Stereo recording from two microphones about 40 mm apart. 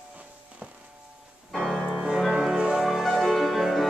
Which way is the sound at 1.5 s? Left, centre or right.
Centre.